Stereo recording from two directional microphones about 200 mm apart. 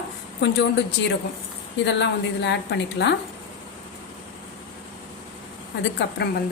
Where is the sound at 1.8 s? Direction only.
60° left (ahead or behind).